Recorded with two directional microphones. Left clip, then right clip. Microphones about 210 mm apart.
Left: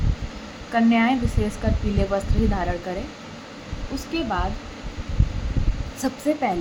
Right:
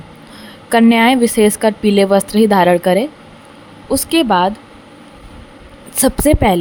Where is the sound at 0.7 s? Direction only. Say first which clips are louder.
Right 10 dB; 50° right (ahead or behind).